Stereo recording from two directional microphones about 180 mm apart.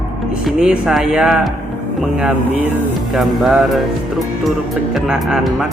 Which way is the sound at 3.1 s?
Centre (ahead or behind).